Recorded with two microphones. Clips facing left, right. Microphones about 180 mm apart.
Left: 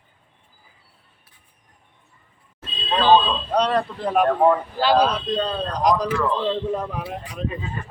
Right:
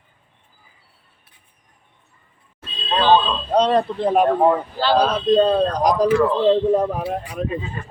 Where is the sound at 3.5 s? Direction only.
25° right (ahead or behind).